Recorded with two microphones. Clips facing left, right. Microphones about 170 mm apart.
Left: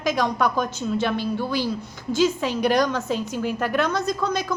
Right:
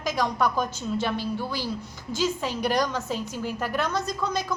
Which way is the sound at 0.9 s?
10° right (ahead or behind).